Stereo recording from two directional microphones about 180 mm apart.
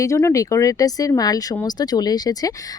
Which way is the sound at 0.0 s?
15° left (ahead or behind).